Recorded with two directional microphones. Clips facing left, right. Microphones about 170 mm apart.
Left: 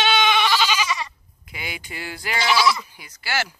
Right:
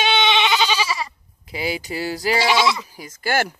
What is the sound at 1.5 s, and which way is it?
Speech, 35° right (ahead or behind).